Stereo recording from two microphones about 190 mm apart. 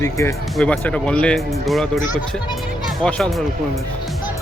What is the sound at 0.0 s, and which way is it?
Speech, 15° left (ahead or behind).